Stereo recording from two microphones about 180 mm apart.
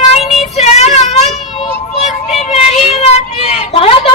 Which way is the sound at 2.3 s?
35° left (ahead or behind).